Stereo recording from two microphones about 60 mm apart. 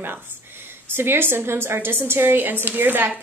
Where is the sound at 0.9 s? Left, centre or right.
Right.